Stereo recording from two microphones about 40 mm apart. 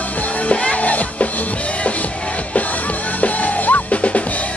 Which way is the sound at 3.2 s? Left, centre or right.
Left.